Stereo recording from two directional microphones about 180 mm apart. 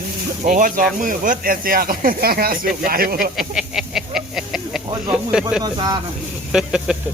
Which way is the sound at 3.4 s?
5° right (ahead or behind).